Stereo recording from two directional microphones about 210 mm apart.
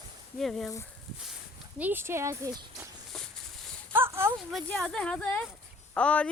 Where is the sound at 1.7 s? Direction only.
10° right (ahead or behind).